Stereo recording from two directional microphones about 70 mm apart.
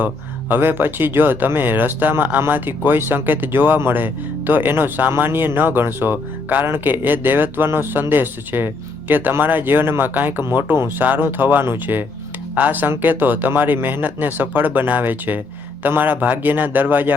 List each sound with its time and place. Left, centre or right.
0.0 s speech: right